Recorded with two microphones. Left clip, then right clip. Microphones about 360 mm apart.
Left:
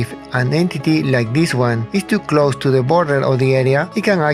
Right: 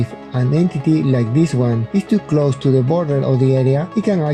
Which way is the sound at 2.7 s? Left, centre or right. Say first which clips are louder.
Left 3 dB; left.